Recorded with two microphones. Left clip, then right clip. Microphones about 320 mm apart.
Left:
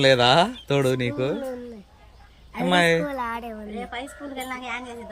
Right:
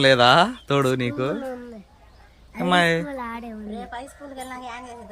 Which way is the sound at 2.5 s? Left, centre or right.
Centre.